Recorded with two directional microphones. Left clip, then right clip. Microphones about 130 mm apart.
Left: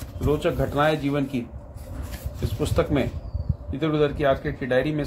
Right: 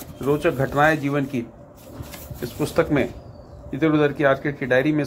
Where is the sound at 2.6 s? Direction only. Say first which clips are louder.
Right 3 dB; 20° right (ahead or behind).